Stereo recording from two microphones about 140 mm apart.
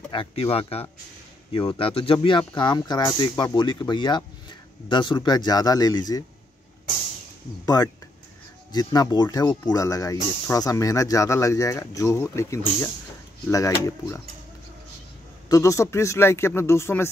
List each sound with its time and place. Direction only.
0.1 s speech: 40° left (ahead or behind)
7.6 s speech: 25° left (ahead or behind)
15.4 s speech: 25° left (ahead or behind)